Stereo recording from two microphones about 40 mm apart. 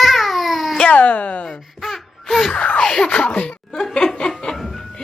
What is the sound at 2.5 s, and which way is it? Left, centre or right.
Speech, left.